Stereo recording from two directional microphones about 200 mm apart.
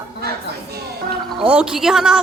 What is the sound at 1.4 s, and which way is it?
Speech, 5° right (ahead or behind).